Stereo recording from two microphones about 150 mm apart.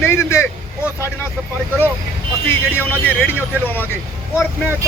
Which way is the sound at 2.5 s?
15° left (ahead or behind).